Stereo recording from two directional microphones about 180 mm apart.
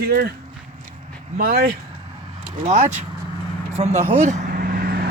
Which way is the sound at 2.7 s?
40° right (ahead or behind).